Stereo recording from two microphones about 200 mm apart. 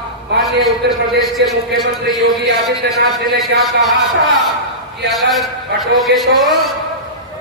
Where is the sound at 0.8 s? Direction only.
55° right (ahead or behind).